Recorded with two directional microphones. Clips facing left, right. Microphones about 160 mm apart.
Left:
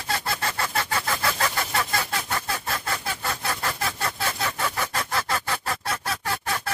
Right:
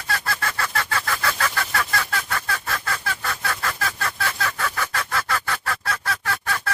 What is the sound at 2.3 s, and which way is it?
Fowl, 25° left (ahead or behind).